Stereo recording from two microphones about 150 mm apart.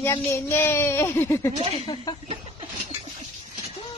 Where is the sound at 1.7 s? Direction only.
35° left (ahead or behind).